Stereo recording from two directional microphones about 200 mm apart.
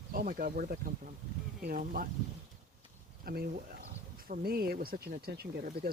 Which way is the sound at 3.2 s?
45° right (ahead or behind).